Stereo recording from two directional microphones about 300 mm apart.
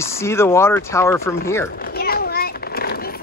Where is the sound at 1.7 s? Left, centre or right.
Left.